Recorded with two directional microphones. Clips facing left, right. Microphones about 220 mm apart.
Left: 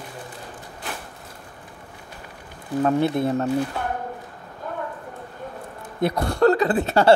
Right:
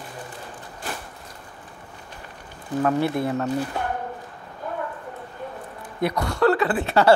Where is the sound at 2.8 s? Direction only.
20° left (ahead or behind).